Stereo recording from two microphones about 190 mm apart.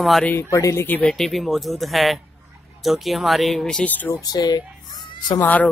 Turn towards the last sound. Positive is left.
turn(degrees=10)  # may be behind; listen again after turning